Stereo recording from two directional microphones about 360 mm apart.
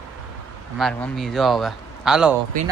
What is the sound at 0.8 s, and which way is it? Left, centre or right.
A man's voice, centre.